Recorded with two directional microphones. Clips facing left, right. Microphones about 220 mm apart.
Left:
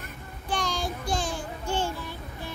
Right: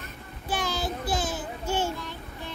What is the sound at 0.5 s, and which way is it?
Child singing, 5° right (ahead or behind).